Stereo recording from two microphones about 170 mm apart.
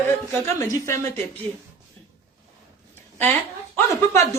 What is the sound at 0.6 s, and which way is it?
Speech, 15° left (ahead or behind).